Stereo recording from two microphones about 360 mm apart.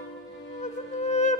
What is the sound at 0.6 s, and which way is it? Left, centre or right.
Music, centre.